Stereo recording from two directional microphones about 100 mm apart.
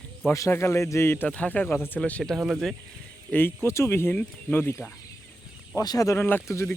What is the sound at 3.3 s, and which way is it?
Speech, 20° left (ahead or behind).